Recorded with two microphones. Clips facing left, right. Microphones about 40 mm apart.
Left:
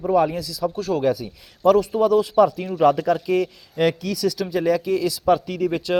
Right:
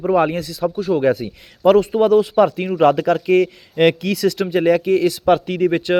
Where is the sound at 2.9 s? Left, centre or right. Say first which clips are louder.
Right 4 dB; right.